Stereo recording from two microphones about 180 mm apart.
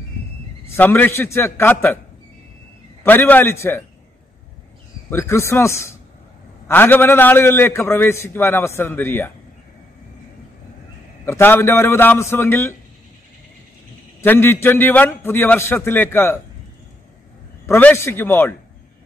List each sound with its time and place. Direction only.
0.7 s a man's voice: 10° left (ahead or behind)
3.0 s a man's voice: 10° left (ahead or behind)
5.1 s a man's voice: 15° left (ahead or behind)
11.2 s a man's voice: 15° left (ahead or behind)
14.2 s a man's voice: 10° left (ahead or behind)
17.6 s a man's voice: 15° left (ahead or behind)